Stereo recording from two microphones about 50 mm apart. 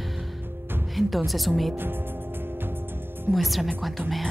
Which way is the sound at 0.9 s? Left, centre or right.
Centre.